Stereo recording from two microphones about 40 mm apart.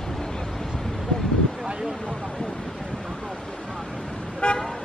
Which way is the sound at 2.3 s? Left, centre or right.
Centre.